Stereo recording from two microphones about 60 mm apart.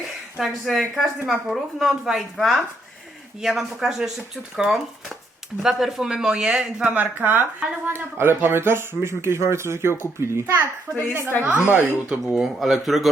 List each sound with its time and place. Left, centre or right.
0.3 s speech: centre
6.8 s speech: right
7.9 s speech: right
11.4 s speech: right
12.2 s speech: centre